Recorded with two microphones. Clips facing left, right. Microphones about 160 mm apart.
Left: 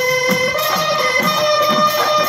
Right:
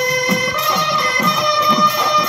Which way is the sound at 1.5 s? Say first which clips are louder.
Left 2 dB; 30° left (ahead or behind).